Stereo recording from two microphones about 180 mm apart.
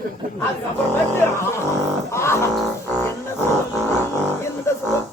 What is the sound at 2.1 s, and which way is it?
Music, 15° left (ahead or behind).